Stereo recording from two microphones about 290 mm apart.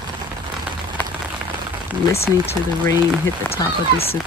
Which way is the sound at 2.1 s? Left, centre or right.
Centre.